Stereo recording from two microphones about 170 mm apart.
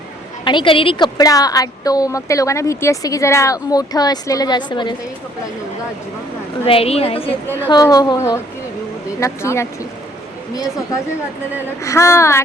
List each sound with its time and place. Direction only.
0.4 s a woman's voice: 30° left (ahead or behind)
6.7 s a woman's voice: 35° left (ahead or behind)
7.7 s a woman's voice: 20° left (ahead or behind)
11.8 s speech: 15° left (ahead or behind)